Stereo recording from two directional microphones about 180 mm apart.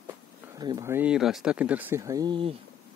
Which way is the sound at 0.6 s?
20° right (ahead or behind).